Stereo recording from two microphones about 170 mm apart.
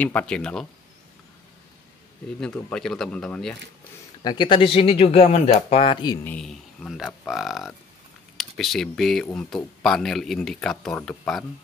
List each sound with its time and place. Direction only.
0.0 s speech: 10° left (ahead or behind)
2.4 s speech: 5° left (ahead or behind)
4.2 s speech: 25° left (ahead or behind)
6.2 s speech: 5° left (ahead or behind)